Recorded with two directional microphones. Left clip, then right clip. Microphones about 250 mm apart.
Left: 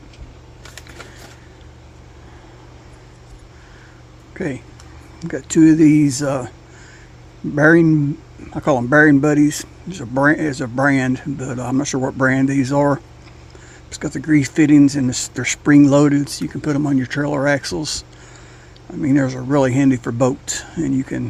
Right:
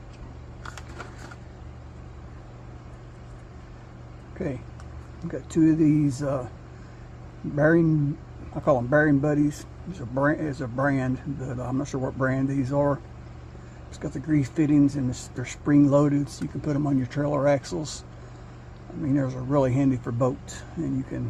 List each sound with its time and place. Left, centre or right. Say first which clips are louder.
4.4 s speech: left 7 dB; left
7.5 s speech: left 9 dB; left
11.9 s speech: left 9 dB; left
12.2 s speech: left 10 dB; left
13.9 s speech: left 9 dB; left
19.0 s speech: left 9 dB; left